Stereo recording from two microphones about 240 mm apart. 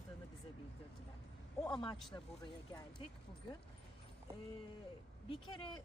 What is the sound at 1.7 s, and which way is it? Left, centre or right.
Speech, centre.